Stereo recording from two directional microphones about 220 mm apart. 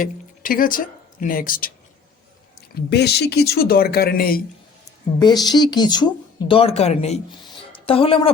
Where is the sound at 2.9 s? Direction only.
50° left (ahead or behind).